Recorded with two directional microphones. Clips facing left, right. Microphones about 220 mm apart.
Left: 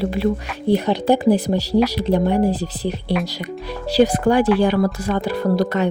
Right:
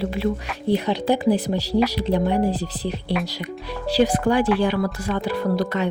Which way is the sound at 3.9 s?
40° left (ahead or behind).